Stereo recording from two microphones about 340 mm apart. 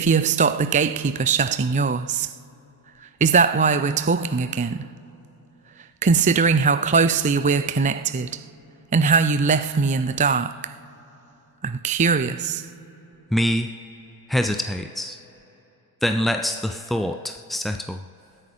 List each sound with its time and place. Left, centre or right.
0.0 s speech: right
6.0 s speech: right
13.3 s speech: centre